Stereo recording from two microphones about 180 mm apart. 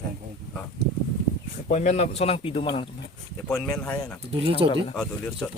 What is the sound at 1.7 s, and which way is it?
Speech, 40° left (ahead or behind).